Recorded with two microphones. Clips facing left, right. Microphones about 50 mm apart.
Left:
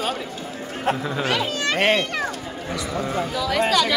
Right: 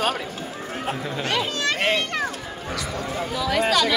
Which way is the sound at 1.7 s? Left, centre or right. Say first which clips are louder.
Left 5 dB; left.